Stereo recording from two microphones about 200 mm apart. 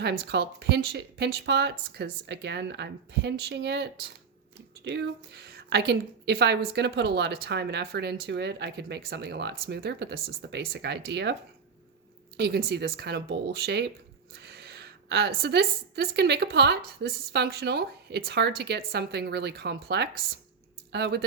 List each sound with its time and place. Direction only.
0.0 s a woman's voice: 55° right (ahead or behind)
12.4 s speech: 50° right (ahead or behind)
14.3 s a sound: 55° right (ahead or behind)
15.4 s a woman's voice: 55° right (ahead or behind)